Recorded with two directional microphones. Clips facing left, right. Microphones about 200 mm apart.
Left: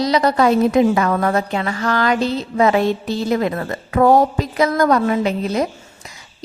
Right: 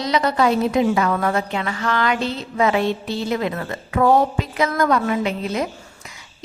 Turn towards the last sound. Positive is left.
turn(degrees=40)  # may be behind; listen again after turning